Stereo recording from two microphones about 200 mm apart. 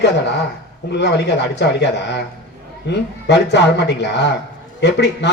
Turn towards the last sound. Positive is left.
turn(degrees=60)  # may be behind; listen again after turning